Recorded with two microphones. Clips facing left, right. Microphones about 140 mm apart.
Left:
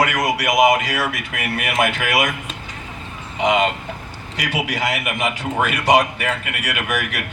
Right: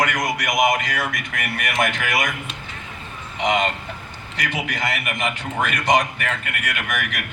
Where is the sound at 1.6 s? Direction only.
10° left (ahead or behind).